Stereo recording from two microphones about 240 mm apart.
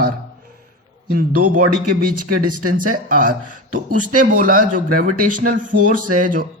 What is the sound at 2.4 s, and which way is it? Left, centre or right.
Speech, right.